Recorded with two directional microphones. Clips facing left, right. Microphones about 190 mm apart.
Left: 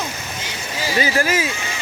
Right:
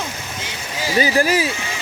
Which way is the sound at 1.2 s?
35° right (ahead or behind).